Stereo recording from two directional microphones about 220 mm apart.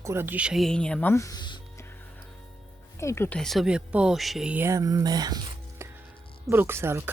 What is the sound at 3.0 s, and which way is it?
Speech, 10° left (ahead or behind).